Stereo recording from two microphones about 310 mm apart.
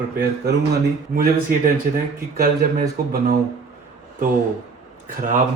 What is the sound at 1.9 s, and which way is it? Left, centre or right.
Speech, right.